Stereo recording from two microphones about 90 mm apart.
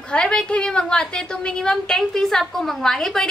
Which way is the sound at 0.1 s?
10° left (ahead or behind).